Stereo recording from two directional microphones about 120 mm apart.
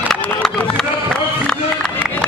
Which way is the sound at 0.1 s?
5° left (ahead or behind).